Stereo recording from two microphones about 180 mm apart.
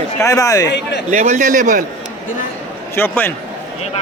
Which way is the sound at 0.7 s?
70° left (ahead or behind).